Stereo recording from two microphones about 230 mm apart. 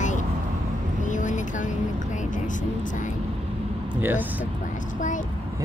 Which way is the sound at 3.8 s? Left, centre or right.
Centre.